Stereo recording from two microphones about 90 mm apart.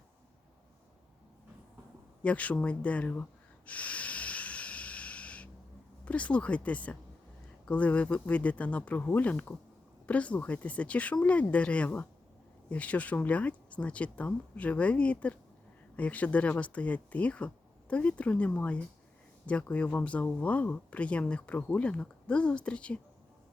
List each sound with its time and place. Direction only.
2.2 s speech: 15° left (ahead or behind)
3.7 s snort: 15° left (ahead or behind)
6.1 s speech: 15° left (ahead or behind)